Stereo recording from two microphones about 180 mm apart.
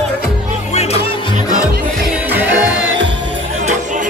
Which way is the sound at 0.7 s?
35° left (ahead or behind).